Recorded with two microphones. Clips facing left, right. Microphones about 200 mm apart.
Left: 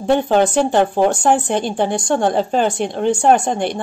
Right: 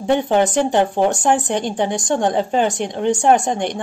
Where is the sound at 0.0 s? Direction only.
15° right (ahead or behind).